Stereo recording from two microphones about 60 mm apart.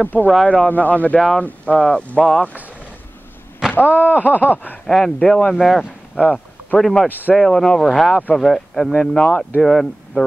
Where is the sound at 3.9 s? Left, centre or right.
Right.